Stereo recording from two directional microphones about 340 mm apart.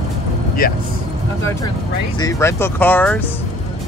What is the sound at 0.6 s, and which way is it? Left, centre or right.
Speech, left.